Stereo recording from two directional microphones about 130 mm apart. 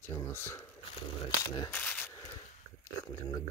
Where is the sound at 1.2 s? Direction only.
35° left (ahead or behind).